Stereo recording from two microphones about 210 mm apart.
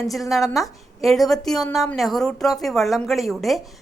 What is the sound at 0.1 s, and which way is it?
A woman's voice, centre (ahead or behind).